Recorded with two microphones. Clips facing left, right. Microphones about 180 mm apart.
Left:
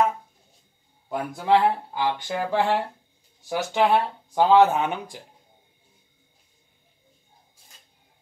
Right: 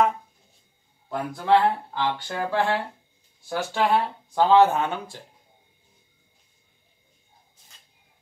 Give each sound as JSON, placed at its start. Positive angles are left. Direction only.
{"t": 1.0, "sound": "speech", "side_deg": 5}
{"t": 2.0, "sound": "speech", "side_deg": 15}